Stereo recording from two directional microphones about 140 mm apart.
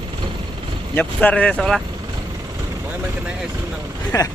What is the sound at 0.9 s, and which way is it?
Speech, 10° left (ahead or behind).